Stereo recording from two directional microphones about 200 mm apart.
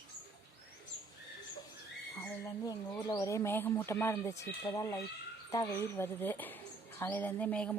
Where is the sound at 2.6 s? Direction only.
20° left (ahead or behind).